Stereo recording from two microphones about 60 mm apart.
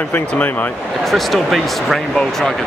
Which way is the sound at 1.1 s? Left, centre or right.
Centre.